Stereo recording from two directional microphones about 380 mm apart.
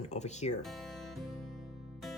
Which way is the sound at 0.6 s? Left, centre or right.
Centre.